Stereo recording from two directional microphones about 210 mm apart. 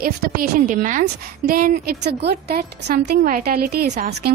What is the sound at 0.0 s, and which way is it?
A woman's voice, 40° right (ahead or behind).